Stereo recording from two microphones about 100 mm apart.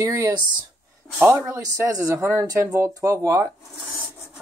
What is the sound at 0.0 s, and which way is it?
Speech, 35° right (ahead or behind).